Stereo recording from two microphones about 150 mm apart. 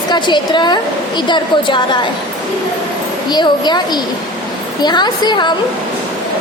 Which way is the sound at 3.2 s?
30° left (ahead or behind).